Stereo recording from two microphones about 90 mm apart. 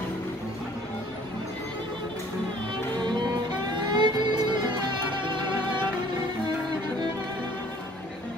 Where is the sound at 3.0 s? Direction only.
55° right (ahead or behind).